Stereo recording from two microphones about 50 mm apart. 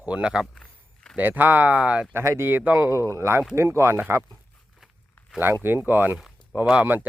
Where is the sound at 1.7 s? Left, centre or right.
Right.